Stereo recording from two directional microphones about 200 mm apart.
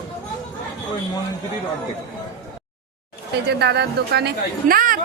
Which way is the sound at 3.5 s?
55° right (ahead or behind).